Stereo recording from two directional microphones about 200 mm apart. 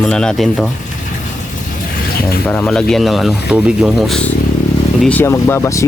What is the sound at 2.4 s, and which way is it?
Speech, 5° left (ahead or behind).